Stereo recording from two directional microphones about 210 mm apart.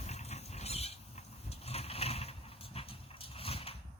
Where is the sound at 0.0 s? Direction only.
30° left (ahead or behind).